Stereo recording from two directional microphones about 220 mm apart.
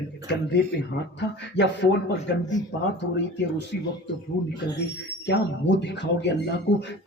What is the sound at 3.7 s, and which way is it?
Speech, 45° left (ahead or behind).